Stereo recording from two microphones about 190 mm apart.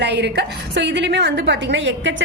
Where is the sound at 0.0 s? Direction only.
65° right (ahead or behind).